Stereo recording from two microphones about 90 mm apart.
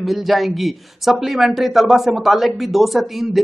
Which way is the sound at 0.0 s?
Centre (ahead or behind).